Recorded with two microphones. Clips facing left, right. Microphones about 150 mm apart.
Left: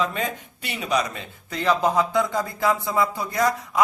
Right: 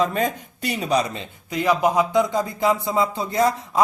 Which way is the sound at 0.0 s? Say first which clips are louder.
Right 4 dB; 40° right (ahead or behind).